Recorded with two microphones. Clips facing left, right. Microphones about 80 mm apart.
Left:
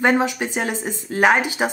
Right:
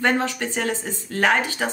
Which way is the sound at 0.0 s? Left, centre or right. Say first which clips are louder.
Left 3 dB; centre.